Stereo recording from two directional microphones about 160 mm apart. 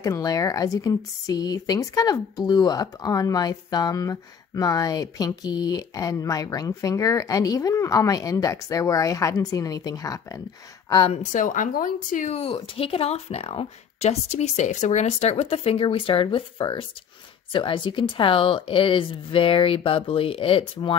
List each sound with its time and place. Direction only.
0.0 s speech: 20° left (ahead or behind)
11.1 s a woman's voice: 55° left (ahead or behind); by 20.9 s 35° left (ahead or behind)